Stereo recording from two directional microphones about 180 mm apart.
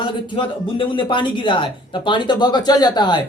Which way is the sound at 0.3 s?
25° left (ahead or behind).